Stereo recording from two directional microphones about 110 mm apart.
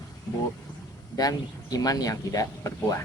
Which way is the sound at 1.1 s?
35° left (ahead or behind).